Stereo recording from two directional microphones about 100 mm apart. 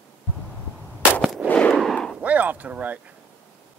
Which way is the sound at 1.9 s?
5° left (ahead or behind).